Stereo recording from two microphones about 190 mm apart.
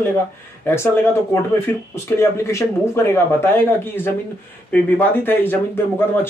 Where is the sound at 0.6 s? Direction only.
10° left (ahead or behind).